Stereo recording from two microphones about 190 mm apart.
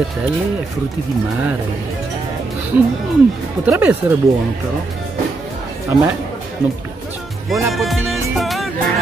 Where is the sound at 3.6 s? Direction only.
10° right (ahead or behind).